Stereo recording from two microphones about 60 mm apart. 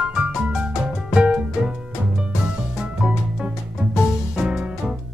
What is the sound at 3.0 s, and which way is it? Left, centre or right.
Music, centre.